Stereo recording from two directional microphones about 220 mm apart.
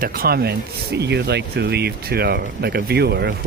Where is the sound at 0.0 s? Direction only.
45° right (ahead or behind).